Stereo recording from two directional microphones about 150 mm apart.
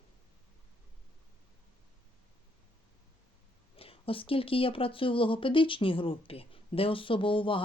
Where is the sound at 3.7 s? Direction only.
40° left (ahead or behind).